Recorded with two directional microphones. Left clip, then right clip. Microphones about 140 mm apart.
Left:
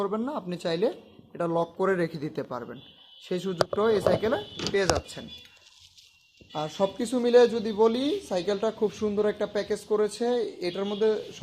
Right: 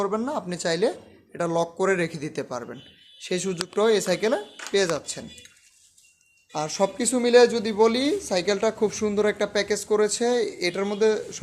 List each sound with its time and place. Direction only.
0.0 s speech: 10° right (ahead or behind)
6.6 s speech: 15° right (ahead or behind)
10.4 s speech: 10° right (ahead or behind)